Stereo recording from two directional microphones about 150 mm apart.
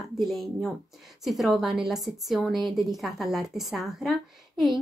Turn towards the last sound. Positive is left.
turn(degrees=0)  # may be behind; listen again after turning